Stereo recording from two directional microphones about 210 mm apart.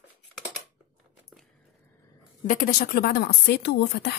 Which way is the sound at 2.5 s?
40° left (ahead or behind).